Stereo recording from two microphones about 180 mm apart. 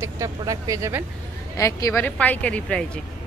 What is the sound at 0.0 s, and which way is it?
Speech, 15° right (ahead or behind).